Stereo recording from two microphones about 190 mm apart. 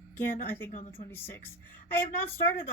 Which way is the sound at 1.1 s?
10° left (ahead or behind).